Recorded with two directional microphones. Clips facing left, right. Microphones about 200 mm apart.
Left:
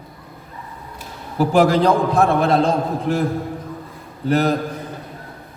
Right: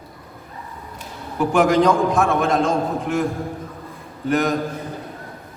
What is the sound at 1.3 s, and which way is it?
A man's voice, 35° left (ahead or behind).